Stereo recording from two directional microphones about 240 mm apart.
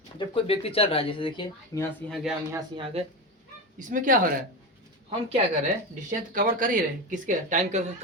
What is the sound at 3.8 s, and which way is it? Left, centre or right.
Speech, right.